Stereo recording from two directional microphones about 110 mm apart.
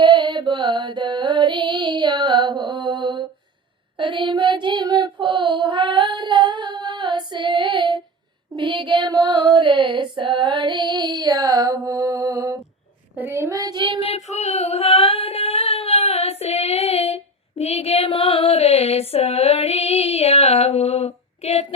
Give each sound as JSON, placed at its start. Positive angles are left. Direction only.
{"t": 0.0, "sound": "carnatic music", "side_deg": -40}
{"t": 3.9, "sound": "child singing", "side_deg": -45}
{"t": 5.6, "sound": "female singing", "side_deg": -50}
{"t": 8.5, "sound": "child singing", "side_deg": -50}
{"t": 9.1, "sound": "female singing", "side_deg": -30}
{"t": 9.6, "sound": "female singing", "side_deg": -45}
{"t": 13.1, "sound": "a woman's voice", "side_deg": -20}
{"t": 13.5, "sound": "female singing", "side_deg": -35}
{"t": 14.0, "sound": "female singing", "side_deg": 75}